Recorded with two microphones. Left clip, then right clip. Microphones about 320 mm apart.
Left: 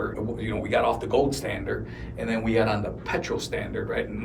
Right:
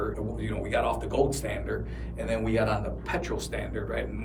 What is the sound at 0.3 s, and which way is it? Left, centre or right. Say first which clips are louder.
Speech: left 5 dB; centre.